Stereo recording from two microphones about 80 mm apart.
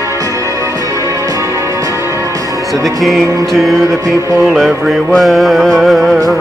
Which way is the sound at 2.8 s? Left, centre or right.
Centre.